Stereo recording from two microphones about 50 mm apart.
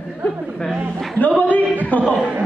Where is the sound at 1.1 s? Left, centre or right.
Left.